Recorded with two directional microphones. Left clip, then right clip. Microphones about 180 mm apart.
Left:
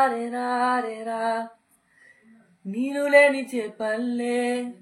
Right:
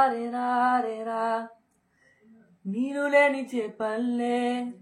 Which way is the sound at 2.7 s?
25° left (ahead or behind).